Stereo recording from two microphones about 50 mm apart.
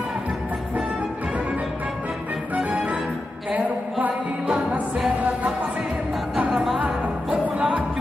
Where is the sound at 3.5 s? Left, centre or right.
Right.